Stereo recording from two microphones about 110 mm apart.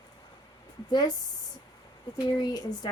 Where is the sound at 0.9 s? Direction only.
40° left (ahead or behind).